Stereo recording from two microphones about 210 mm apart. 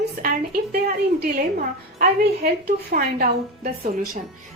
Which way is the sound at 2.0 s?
45° right (ahead or behind).